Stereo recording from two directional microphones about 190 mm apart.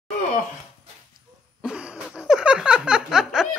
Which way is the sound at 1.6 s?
5° right (ahead or behind).